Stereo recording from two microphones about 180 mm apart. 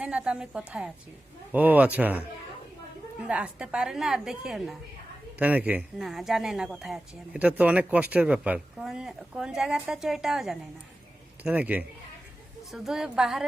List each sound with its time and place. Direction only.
0.0 s speech: 5° right (ahead or behind)